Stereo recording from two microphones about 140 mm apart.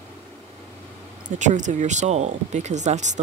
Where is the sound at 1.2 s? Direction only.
60° right (ahead or behind).